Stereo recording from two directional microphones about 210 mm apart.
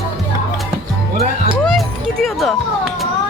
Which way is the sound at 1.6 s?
Centre (ahead or behind).